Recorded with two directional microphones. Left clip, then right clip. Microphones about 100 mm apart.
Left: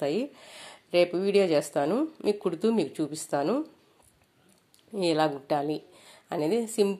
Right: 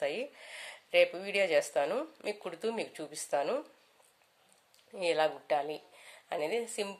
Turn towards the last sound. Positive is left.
turn(degrees=35)  # may be behind; listen again after turning